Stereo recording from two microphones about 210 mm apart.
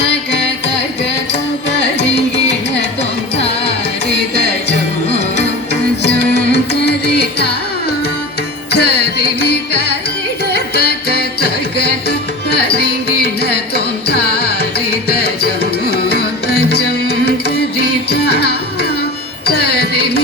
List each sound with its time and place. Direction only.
6.3 s music: 50° left (ahead or behind)
8.7 s carnatic music: 50° left (ahead or behind)
10.5 s music: 50° left (ahead or behind)